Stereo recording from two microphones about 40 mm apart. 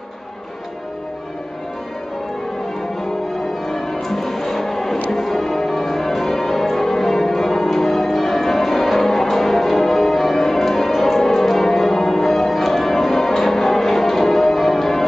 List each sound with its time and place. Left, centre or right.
3.6 s music: centre
5.1 s change ringing: centre